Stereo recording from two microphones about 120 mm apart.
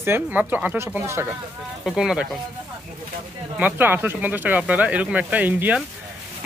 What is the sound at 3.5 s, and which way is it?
Speech, 15° right (ahead or behind).